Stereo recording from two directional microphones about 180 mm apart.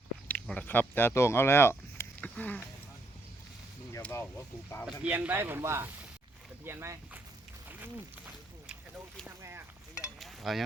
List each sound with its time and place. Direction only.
0.3 s speech: 5° left (ahead or behind)
3.9 s speech: 15° left (ahead or behind)
4.9 s speech: 5° right (ahead or behind)
8.6 s a sound: 5° right (ahead or behind)
10.2 s stir: centre (ahead or behind)